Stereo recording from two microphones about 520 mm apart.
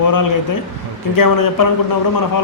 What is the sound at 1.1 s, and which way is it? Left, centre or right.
Speech, left.